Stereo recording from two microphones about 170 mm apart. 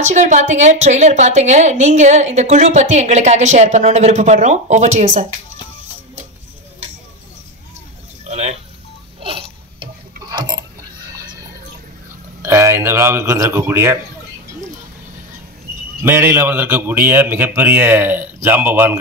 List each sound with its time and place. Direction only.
0.0 s a woman's voice: 45° right (ahead or behind)
8.3 s a sound: 40° right (ahead or behind); by 10.6 s 25° right (ahead or behind)
12.4 s speech: 15° right (ahead or behind)
16.0 s speech: 15° right (ahead or behind)